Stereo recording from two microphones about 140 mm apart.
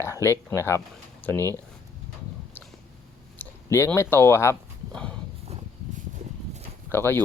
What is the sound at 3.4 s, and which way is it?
Speech, 15° left (ahead or behind).